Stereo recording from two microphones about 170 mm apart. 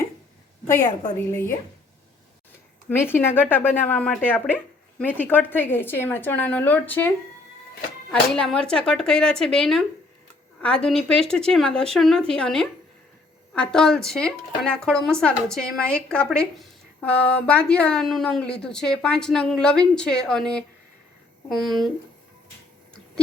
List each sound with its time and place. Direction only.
0.7 s speech: 20° left (ahead or behind)
2.9 s speech: 10° left (ahead or behind)
8.1 s a woman's voice: 5° left (ahead or behind)